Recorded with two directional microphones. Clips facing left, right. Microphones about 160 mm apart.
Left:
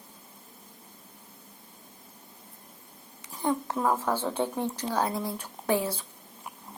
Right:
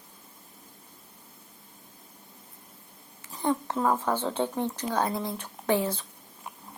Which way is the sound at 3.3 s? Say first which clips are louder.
Right 1 dB; 10° left (ahead or behind).